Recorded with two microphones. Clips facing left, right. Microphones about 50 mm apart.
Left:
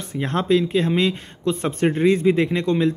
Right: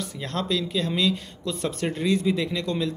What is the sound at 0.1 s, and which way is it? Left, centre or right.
A man's voice, left.